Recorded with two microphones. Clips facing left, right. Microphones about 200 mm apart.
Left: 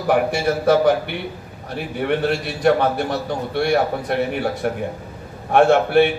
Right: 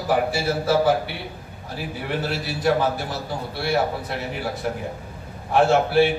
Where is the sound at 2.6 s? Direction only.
65° left (ahead or behind).